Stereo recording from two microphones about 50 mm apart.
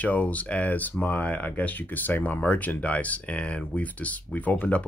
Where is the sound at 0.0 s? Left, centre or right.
Left.